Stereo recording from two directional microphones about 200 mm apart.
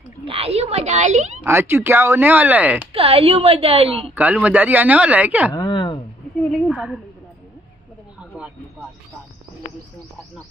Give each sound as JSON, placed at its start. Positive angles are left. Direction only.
{"t": 0.2, "sound": "speech", "side_deg": -30}
{"t": 1.4, "sound": "speech", "side_deg": -10}
{"t": 2.9, "sound": "a woman's voice", "side_deg": -30}
{"t": 4.1, "sound": "speech", "side_deg": -5}
{"t": 5.5, "sound": "a sound", "side_deg": 20}
{"t": 6.7, "sound": "a woman's voice", "side_deg": -5}